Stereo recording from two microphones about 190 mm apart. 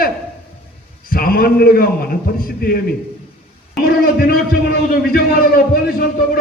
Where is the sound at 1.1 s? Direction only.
50° left (ahead or behind).